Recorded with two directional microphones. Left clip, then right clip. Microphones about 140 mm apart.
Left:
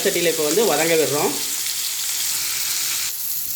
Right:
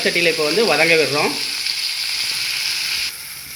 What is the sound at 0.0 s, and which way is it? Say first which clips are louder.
Speech: right 3 dB; 15° left (ahead or behind).